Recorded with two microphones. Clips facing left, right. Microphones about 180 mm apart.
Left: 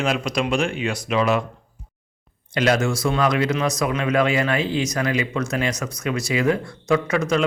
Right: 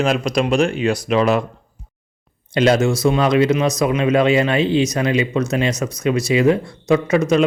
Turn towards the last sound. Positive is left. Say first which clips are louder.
# right 5 dB
turn(degrees=-20)  # may be behind; listen again after turning